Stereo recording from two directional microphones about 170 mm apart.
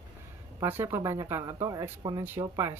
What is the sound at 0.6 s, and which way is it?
Speech, 15° right (ahead or behind).